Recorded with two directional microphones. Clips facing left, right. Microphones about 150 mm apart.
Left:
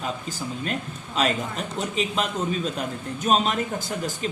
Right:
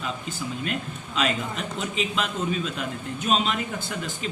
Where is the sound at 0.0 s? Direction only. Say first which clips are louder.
Left 1 dB; 40° left (ahead or behind).